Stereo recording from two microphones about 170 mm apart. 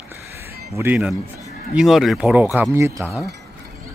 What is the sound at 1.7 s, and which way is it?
Speech, centre (ahead or behind).